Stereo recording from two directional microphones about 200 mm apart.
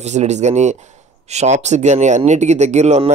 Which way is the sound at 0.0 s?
35° right (ahead or behind).